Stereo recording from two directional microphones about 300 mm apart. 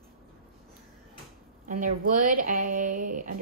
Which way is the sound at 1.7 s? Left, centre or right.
Right.